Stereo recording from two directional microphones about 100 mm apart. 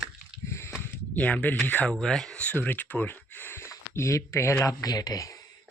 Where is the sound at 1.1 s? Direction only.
15° left (ahead or behind).